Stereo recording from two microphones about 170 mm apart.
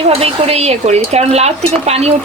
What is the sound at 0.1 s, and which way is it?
Speech, 35° right (ahead or behind).